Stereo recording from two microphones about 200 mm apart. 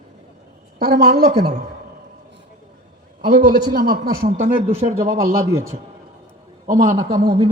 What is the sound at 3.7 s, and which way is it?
A man's voice, 50° right (ahead or behind).